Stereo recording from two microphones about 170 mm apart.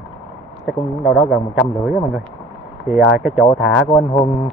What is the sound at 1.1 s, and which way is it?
A man's voice, centre (ahead or behind).